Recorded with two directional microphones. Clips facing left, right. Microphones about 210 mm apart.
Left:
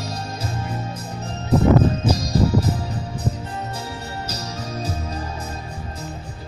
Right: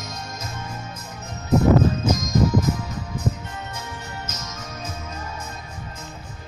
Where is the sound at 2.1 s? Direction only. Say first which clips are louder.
Left 1 dB; 35° left (ahead or behind).